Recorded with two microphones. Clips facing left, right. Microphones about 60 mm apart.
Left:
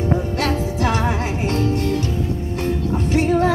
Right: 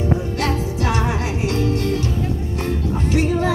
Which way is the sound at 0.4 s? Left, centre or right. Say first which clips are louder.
Left 1 dB; left.